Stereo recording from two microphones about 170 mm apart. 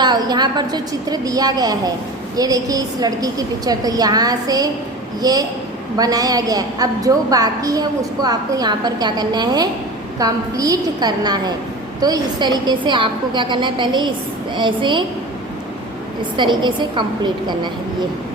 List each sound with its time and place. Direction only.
0.0 s a woman's voice: 25° right (ahead or behind)
16.4 s a woman's voice: 25° right (ahead or behind)